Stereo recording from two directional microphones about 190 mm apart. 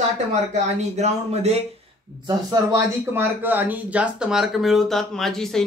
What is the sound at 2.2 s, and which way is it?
Speech, 15° right (ahead or behind).